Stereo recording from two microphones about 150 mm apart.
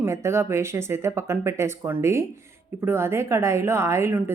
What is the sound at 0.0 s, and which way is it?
A woman's voice, 20° right (ahead or behind).